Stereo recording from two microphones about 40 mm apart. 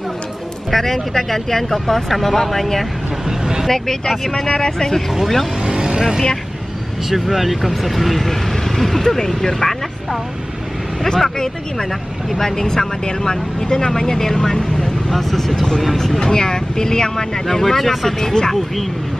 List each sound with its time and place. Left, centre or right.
0.7 s speech: centre
3.3 s speech: centre
3.6 s speech: centre
5.1 s speech: centre
5.6 s vehicle: centre
7.1 s speech: centre
11.1 s speech: centre